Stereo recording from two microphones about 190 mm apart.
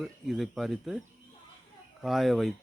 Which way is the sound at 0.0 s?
Centre (ahead or behind).